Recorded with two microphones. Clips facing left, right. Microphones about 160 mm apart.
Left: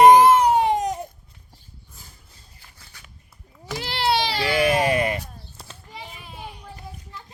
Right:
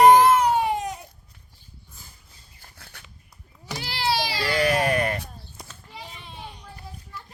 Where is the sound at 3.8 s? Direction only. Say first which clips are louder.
Left 3 dB; 55° left (ahead or behind).